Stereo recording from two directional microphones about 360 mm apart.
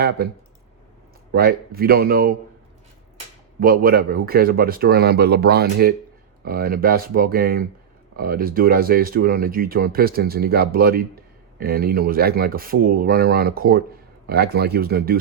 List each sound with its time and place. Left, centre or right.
0.2 s speech: right
3.6 s speech: right